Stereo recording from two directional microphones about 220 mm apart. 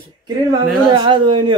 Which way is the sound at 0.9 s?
20° right (ahead or behind).